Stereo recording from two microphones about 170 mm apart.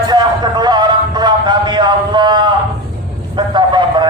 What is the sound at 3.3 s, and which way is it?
Vehicle, 25° right (ahead or behind).